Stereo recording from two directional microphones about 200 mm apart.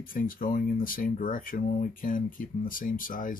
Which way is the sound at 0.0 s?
45° left (ahead or behind).